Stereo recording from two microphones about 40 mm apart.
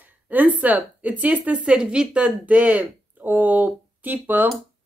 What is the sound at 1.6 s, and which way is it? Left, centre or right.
Speech, right.